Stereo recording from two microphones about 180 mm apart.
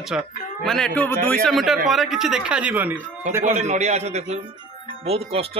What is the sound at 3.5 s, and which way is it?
A man's voice, 40° right (ahead or behind).